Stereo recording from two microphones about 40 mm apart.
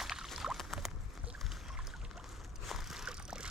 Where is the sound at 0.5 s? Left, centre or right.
Centre.